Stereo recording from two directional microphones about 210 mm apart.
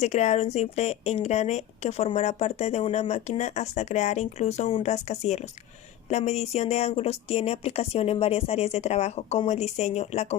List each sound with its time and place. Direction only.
0.0 s a woman's voice: 35° left (ahead or behind)